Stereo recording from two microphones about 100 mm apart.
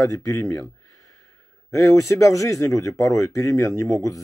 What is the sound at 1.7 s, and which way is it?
Speech, 30° left (ahead or behind).